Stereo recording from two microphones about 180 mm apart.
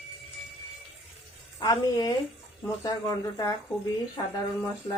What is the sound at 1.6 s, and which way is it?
Speech, 20° left (ahead or behind).